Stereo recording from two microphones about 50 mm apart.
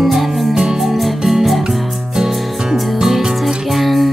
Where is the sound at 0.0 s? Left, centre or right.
Centre.